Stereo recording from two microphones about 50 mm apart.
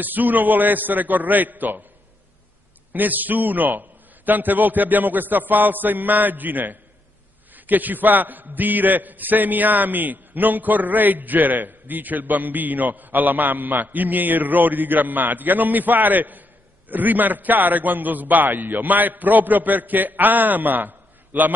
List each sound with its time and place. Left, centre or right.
0.0 s a man's voice: right
2.9 s a man's voice: right